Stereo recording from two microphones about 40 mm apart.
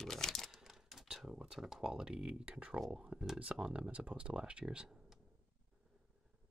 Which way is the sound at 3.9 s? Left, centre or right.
Right.